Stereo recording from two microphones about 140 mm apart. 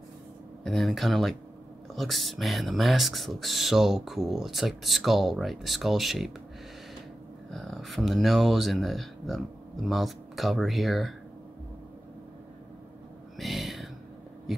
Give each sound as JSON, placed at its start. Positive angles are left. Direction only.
{"t": 0.7, "sound": "speech", "side_deg": 0}
{"t": 7.5, "sound": "speech", "side_deg": 0}
{"t": 13.4, "sound": "a sound", "side_deg": 0}